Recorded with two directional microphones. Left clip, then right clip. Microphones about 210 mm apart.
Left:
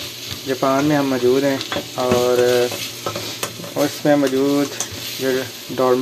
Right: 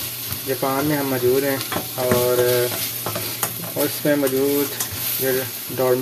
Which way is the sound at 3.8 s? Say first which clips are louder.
Left 4 dB; centre (ahead or behind).